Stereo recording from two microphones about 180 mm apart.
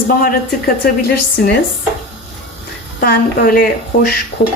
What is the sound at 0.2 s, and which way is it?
Speech, 55° left (ahead or behind).